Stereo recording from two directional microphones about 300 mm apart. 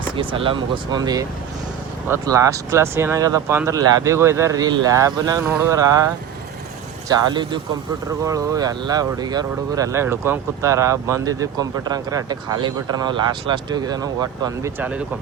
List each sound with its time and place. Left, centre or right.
0.3 s speech: centre
7.1 s speech: centre